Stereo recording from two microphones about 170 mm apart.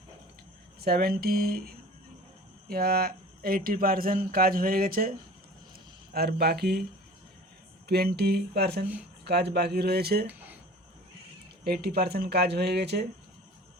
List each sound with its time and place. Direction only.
0.8 s speech: 65° right (ahead or behind)
6.1 s speech: 65° right (ahead or behind)
7.9 s speech: 70° right (ahead or behind)
10.2 s a sound: 10° right (ahead or behind)
11.6 s speech: 65° right (ahead or behind)